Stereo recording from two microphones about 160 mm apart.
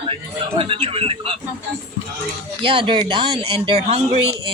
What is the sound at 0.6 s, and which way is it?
Speech, 35° right (ahead or behind).